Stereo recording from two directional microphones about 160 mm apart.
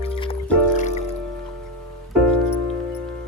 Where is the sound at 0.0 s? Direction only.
35° left (ahead or behind).